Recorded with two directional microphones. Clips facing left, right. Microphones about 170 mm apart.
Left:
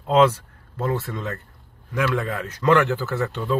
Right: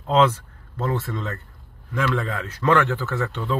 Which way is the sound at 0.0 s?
15° left (ahead or behind).